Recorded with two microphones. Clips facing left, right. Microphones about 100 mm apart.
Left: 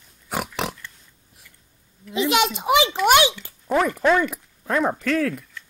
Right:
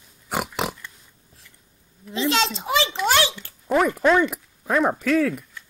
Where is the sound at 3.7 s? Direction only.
5° right (ahead or behind).